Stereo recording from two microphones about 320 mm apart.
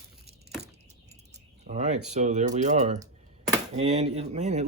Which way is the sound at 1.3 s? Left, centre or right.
Right.